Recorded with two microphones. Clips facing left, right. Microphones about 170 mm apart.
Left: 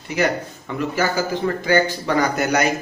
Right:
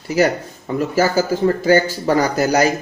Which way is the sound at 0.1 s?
40° right (ahead or behind).